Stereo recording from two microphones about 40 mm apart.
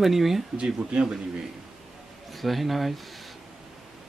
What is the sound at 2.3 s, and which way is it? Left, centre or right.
Speech, centre.